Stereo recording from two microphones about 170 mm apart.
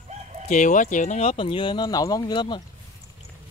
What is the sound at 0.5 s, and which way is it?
Speech, 50° left (ahead or behind).